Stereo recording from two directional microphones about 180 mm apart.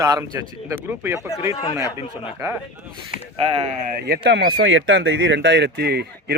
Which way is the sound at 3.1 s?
50° left (ahead or behind).